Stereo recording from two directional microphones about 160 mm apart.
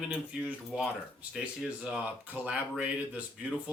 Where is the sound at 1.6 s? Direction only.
Centre (ahead or behind).